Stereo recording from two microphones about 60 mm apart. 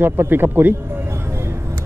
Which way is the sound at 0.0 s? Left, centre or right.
Right.